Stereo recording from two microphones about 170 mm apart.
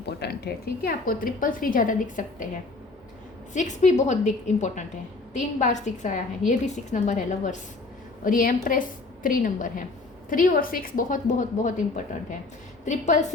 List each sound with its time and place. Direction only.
0.0 s a woman's voice: 75° left (ahead or behind); by 2.5 s 50° left (ahead or behind)
3.5 s a woman's voice: 45° left (ahead or behind)